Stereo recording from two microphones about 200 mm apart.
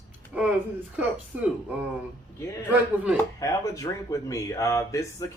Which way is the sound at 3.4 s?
15° left (ahead or behind).